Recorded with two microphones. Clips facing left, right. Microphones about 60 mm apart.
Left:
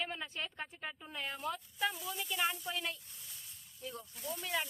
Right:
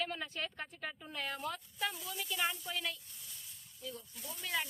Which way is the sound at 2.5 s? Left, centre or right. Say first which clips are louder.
Left 1 dB; left.